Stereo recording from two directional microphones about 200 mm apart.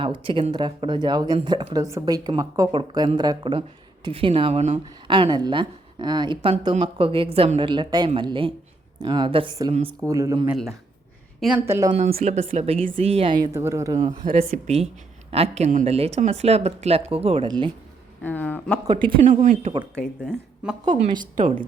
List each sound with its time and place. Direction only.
0.2 s a woman's voice: 25° right (ahead or behind)
10.5 s a woman's voice: centre (ahead or behind)
11.6 s speech: 15° right (ahead or behind)
12.2 s speech: 35° right (ahead or behind); by 14.1 s 15° right (ahead or behind)
14.3 s speech: 30° right (ahead or behind)
18.2 s speech: 10° left (ahead or behind)
18.9 s a woman's voice: 25° right (ahead or behind)
19.3 s speech: 35° right (ahead or behind)
20.0 s speech: 5° left (ahead or behind)
20.8 s a woman's voice: 25° right (ahead or behind)
21.3 s speech: 40° right (ahead or behind)